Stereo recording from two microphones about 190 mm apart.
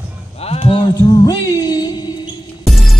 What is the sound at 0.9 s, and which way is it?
Music, 20° left (ahead or behind).